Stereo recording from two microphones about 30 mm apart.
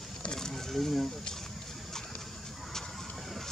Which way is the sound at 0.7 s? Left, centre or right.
Centre.